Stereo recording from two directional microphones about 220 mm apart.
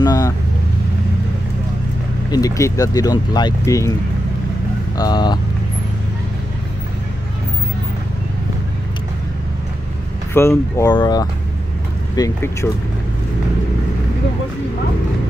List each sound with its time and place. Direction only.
0.0 s speech: 15° left (ahead or behind)
2.3 s speech: 15° left (ahead or behind)
4.9 s speech: 20° left (ahead or behind)
10.3 s speech: 10° left (ahead or behind)